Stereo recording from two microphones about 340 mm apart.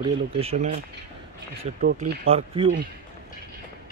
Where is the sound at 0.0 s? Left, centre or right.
Centre.